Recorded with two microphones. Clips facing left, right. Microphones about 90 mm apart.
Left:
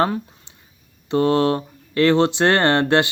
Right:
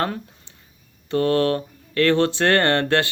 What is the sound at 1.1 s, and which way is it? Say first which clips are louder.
Speech: left 2 dB; 20° left (ahead or behind).